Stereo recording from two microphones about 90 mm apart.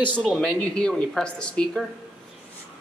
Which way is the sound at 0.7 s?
10° left (ahead or behind).